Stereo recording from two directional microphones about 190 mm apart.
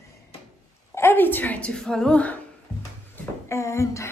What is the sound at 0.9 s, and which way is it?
A woman's voice, 10° left (ahead or behind).